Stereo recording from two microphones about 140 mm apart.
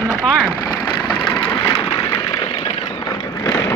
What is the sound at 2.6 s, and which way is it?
Vehicle, 35° left (ahead or behind).